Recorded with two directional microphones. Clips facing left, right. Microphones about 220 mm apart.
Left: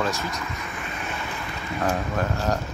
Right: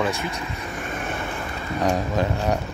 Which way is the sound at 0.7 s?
45° right (ahead or behind).